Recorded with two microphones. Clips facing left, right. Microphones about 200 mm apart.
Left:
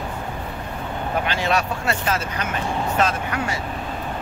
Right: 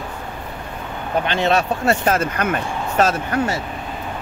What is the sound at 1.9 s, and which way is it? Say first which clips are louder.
Speech: right 6 dB; 50° right (ahead or behind).